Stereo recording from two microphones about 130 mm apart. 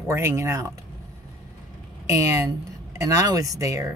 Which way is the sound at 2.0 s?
25° right (ahead or behind).